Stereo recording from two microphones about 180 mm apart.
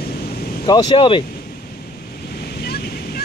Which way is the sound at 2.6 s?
60° left (ahead or behind).